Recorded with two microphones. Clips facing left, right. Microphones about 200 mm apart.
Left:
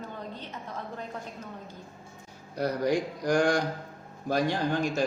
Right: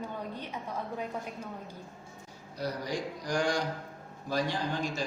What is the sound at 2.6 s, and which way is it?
A man's voice, 55° left (ahead or behind).